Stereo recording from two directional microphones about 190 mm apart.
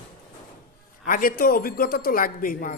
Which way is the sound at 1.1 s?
50° left (ahead or behind).